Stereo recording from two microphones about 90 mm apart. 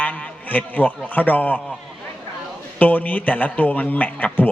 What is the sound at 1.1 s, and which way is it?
Speech, 20° left (ahead or behind).